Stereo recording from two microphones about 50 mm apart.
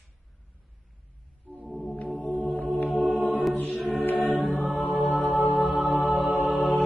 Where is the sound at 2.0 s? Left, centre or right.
Left.